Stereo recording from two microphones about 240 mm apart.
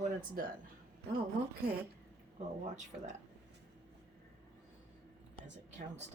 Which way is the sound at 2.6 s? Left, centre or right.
Right.